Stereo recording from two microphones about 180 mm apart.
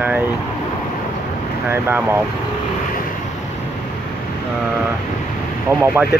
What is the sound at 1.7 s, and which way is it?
Speech, 10° right (ahead or behind).